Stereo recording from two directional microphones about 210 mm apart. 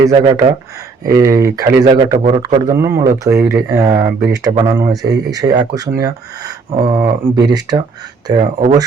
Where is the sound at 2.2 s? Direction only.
30° right (ahead or behind).